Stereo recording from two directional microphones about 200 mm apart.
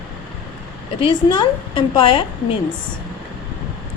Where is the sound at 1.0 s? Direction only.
25° left (ahead or behind).